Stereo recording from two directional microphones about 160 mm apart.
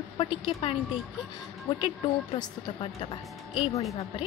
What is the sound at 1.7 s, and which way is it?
A woman's voice, 30° left (ahead or behind).